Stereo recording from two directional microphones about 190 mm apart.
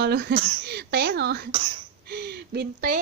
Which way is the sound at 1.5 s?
25° right (ahead or behind).